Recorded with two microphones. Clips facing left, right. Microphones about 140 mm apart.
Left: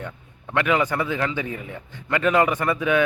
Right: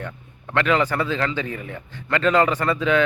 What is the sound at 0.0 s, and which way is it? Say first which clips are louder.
A man's voice: right 1 dB; 15° left (ahead or behind).